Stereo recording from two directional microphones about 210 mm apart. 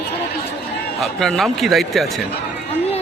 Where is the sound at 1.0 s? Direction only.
Centre (ahead or behind).